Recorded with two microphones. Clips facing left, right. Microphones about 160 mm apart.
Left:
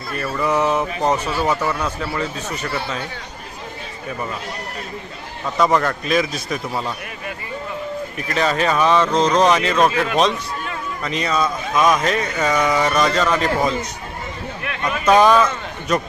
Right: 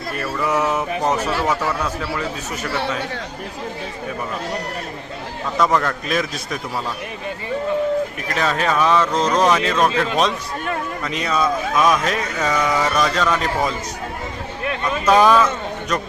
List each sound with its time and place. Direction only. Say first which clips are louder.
0.4 s speech: left 2 dB; 5° right (ahead or behind)
5.5 s speech: left 1 dB; centre (ahead or behind)
8.3 s speech: left 3 dB; centre (ahead or behind)
11.0 s speech: left 1 dB; centre (ahead or behind)
15.0 s a man's voice: left 1 dB; centre (ahead or behind)